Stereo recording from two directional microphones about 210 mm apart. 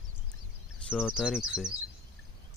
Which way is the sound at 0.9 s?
Centre (ahead or behind).